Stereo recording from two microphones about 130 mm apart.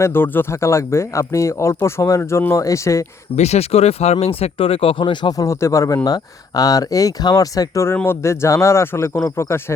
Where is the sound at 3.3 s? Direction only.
55° left (ahead or behind).